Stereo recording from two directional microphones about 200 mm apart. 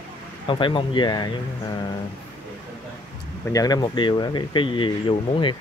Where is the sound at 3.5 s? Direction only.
20° left (ahead or behind).